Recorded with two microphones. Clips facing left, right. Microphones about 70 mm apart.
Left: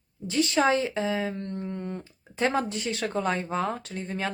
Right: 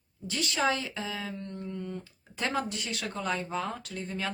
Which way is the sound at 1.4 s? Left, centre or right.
Left.